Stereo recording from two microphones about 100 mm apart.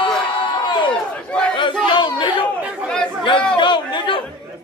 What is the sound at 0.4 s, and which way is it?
Crowd, 55° left (ahead or behind).